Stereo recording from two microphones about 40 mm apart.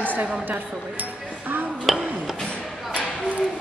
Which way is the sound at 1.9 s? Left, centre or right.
Centre.